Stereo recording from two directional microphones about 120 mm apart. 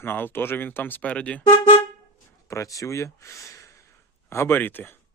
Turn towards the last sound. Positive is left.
turn(degrees=15)  # may be behind; listen again after turning